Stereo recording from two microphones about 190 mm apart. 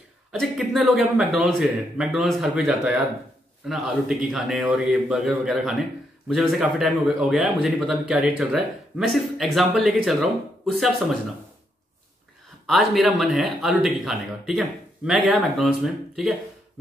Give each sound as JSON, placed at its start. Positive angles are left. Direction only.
{"t": 0.3, "sound": "a man's voice", "side_deg": 0}
{"t": 12.6, "sound": "a man's voice", "side_deg": 0}